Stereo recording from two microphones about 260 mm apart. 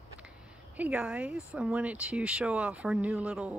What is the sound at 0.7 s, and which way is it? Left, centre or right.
Speech, centre.